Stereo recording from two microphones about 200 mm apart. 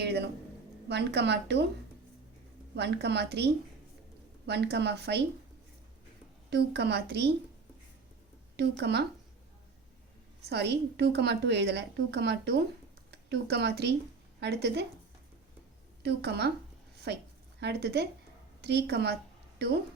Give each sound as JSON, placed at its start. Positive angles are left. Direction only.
{"t": 0.0, "sound": "a sound", "side_deg": -55}
{"t": 0.9, "sound": "a woman's voice", "side_deg": -55}
{"t": 2.7, "sound": "a woman's voice", "side_deg": -55}
{"t": 6.5, "sound": "a woman's voice", "side_deg": -55}
{"t": 8.5, "sound": "a woman's voice", "side_deg": -55}
{"t": 10.5, "sound": "a woman's voice", "side_deg": -55}
{"t": 16.0, "sound": "a woman's voice", "side_deg": -55}